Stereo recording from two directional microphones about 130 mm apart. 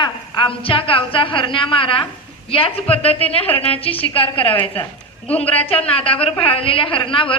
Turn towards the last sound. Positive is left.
turn(degrees=45)  # may be behind; listen again after turning